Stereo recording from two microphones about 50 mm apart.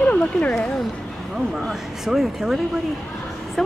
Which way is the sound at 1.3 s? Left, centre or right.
Centre.